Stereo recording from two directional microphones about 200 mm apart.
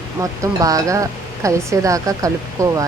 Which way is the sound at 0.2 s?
15° right (ahead or behind).